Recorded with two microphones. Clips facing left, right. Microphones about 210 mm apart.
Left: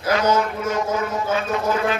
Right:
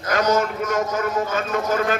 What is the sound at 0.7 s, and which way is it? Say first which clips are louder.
Speech: right 2 dB; 45° right (ahead or behind).